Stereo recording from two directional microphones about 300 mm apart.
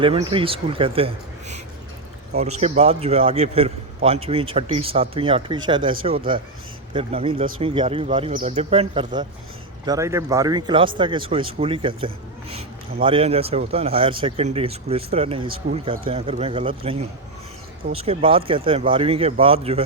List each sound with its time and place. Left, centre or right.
0.0 s a man's voice: centre